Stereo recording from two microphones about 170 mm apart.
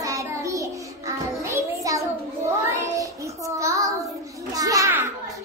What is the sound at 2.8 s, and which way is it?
Child singing, 20° right (ahead or behind).